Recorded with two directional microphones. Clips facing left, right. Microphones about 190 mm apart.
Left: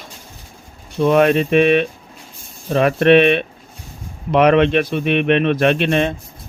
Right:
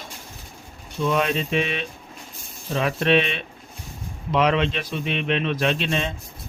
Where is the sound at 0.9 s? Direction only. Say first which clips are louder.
Left 9 dB; 60° left (ahead or behind).